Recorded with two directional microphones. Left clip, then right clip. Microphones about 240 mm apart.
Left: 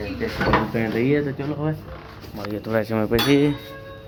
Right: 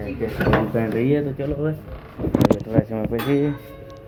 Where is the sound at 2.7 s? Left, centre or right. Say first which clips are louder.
Left 2 dB; left.